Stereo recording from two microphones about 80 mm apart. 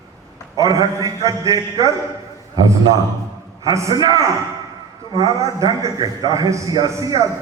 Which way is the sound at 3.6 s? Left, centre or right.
Right.